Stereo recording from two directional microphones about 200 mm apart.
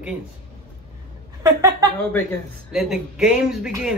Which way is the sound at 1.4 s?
15° right (ahead or behind).